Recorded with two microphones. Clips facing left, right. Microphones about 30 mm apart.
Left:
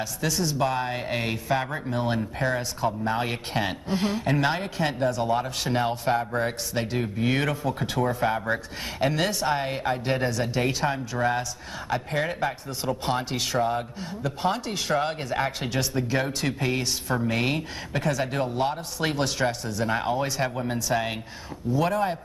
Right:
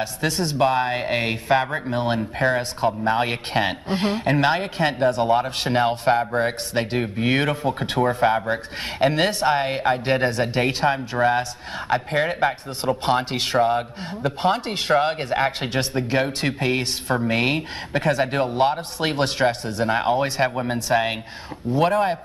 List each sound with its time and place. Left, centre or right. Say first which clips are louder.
0.0 s speech: right 3 dB; right
21.6 s speech: right 5 dB; right